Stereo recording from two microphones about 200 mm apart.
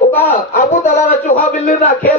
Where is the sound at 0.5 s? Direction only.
40° left (ahead or behind).